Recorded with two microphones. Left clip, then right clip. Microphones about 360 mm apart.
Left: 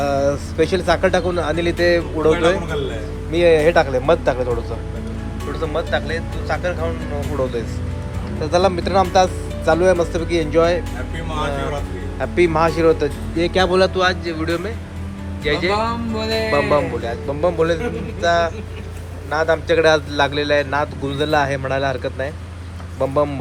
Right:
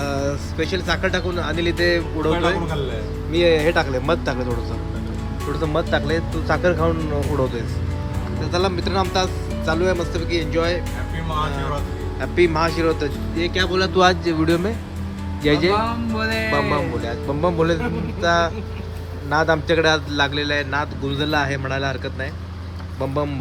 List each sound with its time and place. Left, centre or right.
0.0 s a man's voice: centre
5.5 s speech: centre
8.4 s a man's voice: centre
12.2 s a man's voice: centre
13.9 s speech: centre
15.4 s speech: centre
16.5 s a man's voice: centre